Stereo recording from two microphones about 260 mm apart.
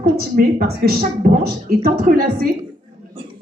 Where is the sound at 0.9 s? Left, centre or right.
Right.